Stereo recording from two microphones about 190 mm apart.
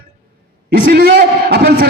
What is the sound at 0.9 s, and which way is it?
Speech, 55° right (ahead or behind).